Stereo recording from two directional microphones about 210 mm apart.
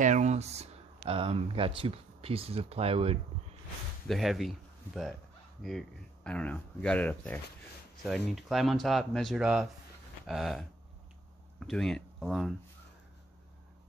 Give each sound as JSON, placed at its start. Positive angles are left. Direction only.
{"t": 0.0, "sound": "speech", "side_deg": -35}
{"t": 4.1, "sound": "speech", "side_deg": 0}